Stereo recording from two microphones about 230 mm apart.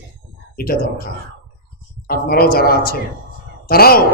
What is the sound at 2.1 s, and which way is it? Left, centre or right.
A man's voice, left.